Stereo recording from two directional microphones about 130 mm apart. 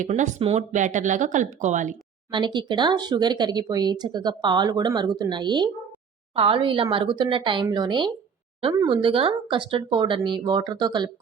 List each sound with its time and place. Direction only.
0.0 s speech: 70° right (ahead or behind)
2.3 s a woman's voice: 35° right (ahead or behind)